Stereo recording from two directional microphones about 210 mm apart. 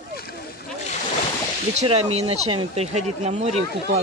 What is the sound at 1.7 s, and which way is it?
Speech, 30° right (ahead or behind).